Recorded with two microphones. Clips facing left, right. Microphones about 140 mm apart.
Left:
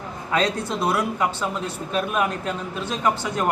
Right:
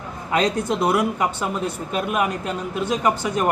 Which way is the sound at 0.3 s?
20° right (ahead or behind).